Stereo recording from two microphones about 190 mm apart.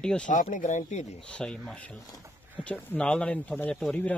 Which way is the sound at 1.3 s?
5° left (ahead or behind).